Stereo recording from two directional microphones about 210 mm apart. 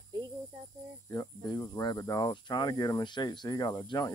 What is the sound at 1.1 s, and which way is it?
Speech, 15° left (ahead or behind).